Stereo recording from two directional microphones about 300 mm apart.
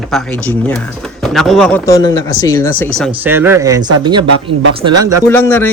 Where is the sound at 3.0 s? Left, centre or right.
Centre.